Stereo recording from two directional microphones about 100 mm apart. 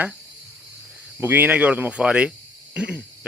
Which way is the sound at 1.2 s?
20° right (ahead or behind).